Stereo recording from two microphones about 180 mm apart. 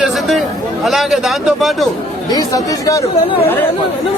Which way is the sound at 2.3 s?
20° left (ahead or behind).